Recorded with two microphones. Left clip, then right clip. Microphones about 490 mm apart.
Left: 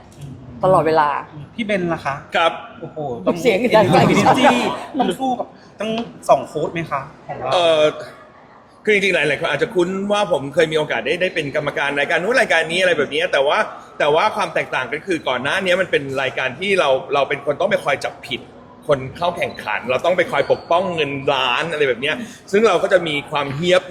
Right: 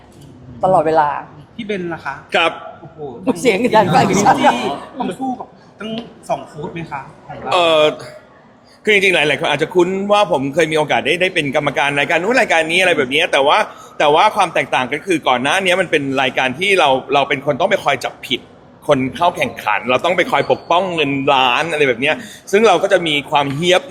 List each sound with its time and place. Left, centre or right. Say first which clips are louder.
0.6 s speech: right 2 dB; centre
1.5 s a woman's voice: left 3 dB; left
3.2 s speech: right 2 dB; centre
5.8 s a woman's voice: left 5 dB; left
7.5 s a man's voice: right 2 dB; right